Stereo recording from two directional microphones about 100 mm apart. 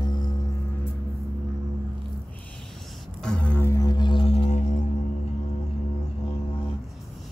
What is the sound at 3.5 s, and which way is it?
Music, 20° left (ahead or behind).